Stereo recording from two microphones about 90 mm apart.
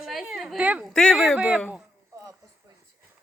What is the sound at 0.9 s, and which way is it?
Speech, 5° left (ahead or behind).